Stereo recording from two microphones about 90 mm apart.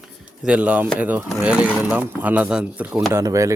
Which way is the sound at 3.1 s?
35° right (ahead or behind).